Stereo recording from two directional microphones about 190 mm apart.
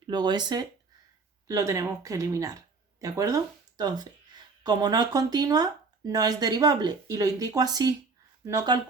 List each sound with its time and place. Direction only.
0.1 s speech: 25° right (ahead or behind)